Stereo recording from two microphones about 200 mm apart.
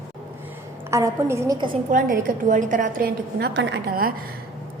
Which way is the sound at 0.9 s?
15° right (ahead or behind).